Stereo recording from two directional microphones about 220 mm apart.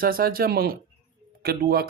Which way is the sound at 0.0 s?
40° right (ahead or behind).